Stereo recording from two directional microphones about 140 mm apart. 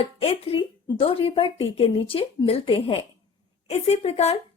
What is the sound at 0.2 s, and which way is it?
A woman's voice, 45° left (ahead or behind).